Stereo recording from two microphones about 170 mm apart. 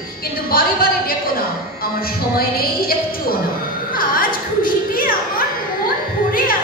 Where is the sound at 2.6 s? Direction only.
60° left (ahead or behind).